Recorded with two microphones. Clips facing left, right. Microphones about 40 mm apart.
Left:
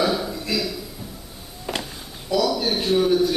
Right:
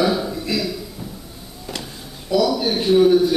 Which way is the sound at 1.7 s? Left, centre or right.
Centre.